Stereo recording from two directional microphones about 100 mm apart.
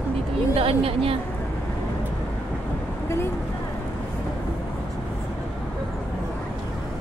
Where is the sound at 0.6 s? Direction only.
70° right (ahead or behind).